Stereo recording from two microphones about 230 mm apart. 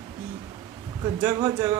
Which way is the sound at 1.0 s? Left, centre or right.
Centre.